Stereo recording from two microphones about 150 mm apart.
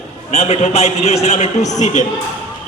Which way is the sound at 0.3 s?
45° left (ahead or behind).